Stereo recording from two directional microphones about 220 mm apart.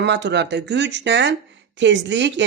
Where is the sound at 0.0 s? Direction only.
50° right (ahead or behind).